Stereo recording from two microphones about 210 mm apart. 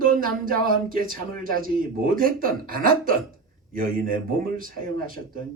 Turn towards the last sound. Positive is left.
turn(degrees=-40)  # may be behind; listen again after turning